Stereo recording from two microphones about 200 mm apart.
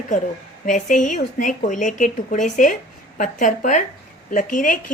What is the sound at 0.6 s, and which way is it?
A woman's voice, 40° left (ahead or behind).